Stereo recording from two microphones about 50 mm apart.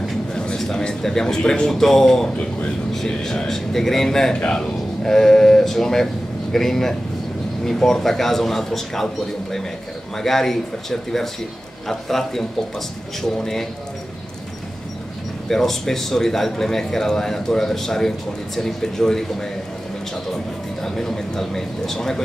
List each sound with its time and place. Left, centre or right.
0.6 s a man's voice: centre
4.4 s a man's voice: left
5.0 s a man's voice: centre
15.4 s a man's voice: centre
20.8 s a man's voice: centre